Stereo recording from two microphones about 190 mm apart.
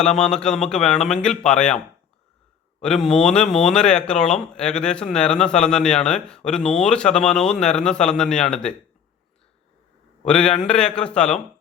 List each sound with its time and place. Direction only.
0.2 s speech: 5° left (ahead or behind)
2.8 s speech: 5° left (ahead or behind)
10.2 s speech: 5° left (ahead or behind)